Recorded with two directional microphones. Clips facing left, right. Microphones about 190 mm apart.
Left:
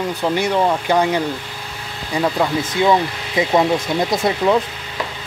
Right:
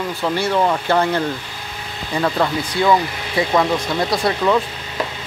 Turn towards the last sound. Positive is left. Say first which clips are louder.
# left 1 dB
turn(degrees=20)  # may be behind; listen again after turning